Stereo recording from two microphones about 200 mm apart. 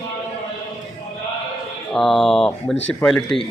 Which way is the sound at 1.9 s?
Centre (ahead or behind).